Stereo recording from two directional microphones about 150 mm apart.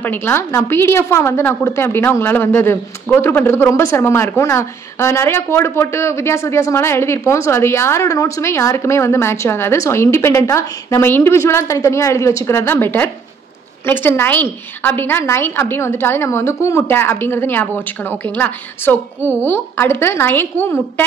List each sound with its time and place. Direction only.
0.0 s a woman's voice: 15° left (ahead or behind)